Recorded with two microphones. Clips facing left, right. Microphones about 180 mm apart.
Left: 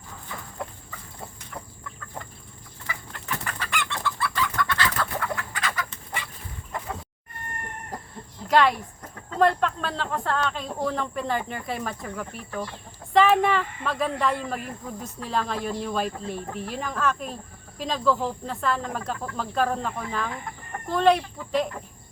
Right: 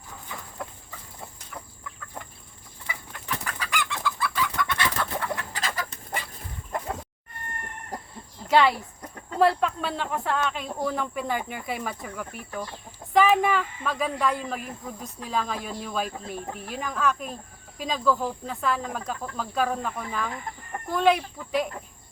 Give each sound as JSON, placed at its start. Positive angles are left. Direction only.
{"t": 2.8, "sound": "chicken", "side_deg": -10}
{"t": 3.2, "sound": "chicken", "side_deg": 0}
{"t": 5.2, "sound": "chicken", "side_deg": -25}
{"t": 5.9, "sound": "dog", "side_deg": -40}
{"t": 8.4, "sound": "a sound", "side_deg": 0}
{"t": 9.4, "sound": "speech", "side_deg": -5}